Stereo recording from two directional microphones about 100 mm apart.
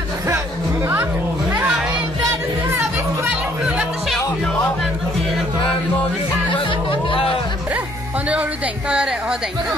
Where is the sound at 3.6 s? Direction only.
10° right (ahead or behind).